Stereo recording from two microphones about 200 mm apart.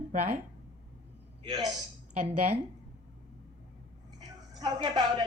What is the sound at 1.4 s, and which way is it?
Speech, 20° right (ahead or behind).